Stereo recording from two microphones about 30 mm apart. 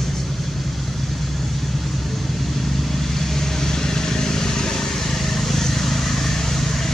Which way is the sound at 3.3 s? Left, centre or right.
Centre.